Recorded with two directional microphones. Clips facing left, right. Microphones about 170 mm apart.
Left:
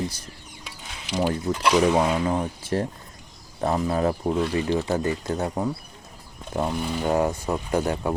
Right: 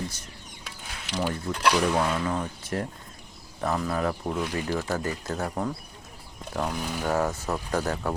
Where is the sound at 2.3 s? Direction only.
30° left (ahead or behind).